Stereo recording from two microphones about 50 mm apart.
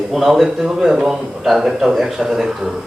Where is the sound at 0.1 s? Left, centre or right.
Centre.